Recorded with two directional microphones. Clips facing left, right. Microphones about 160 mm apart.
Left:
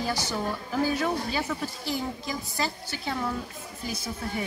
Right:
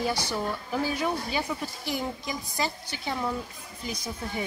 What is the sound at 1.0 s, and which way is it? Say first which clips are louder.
Speech: left 1 dB; 15° right (ahead or behind).